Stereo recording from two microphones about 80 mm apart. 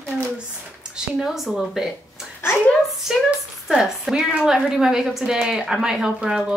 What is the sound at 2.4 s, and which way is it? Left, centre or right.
Speech, left.